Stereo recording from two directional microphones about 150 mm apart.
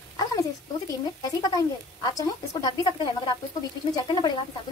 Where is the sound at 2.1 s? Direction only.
25° left (ahead or behind).